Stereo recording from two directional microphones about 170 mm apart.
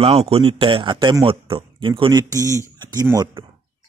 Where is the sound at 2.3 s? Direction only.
20° right (ahead or behind).